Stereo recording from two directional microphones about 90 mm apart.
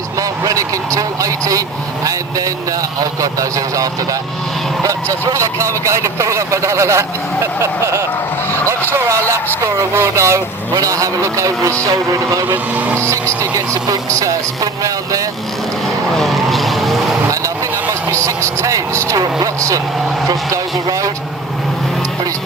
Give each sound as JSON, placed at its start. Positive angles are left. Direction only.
{"t": 0.2, "sound": "vehicle", "side_deg": -40}
{"t": 4.8, "sound": "a man's voice", "side_deg": -35}
{"t": 11.9, "sound": "vehicle", "side_deg": -45}
{"t": 12.7, "sound": "speech", "side_deg": -20}
{"t": 13.0, "sound": "a man's voice", "side_deg": -35}
{"t": 16.1, "sound": "vehicle", "side_deg": 0}
{"t": 18.1, "sound": "a man's voice", "side_deg": -35}